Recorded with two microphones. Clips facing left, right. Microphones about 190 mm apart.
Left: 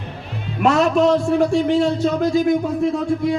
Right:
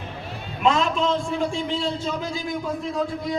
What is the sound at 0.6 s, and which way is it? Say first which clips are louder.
A man's voice: left 6 dB; 70° left (ahead or behind).